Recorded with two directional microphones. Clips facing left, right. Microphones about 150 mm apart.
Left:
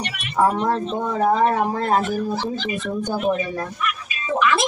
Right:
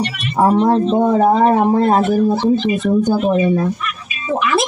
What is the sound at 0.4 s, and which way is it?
Speech, 25° right (ahead or behind).